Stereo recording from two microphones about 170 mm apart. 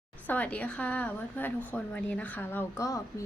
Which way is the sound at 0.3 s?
10° left (ahead or behind).